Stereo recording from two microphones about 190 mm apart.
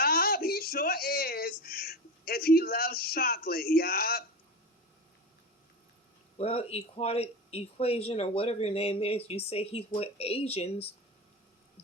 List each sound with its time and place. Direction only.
0.0 s speech: 50° left (ahead or behind)
6.3 s speech: 30° left (ahead or behind)